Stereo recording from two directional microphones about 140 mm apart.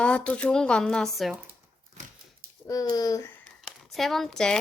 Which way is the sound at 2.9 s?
25° left (ahead or behind).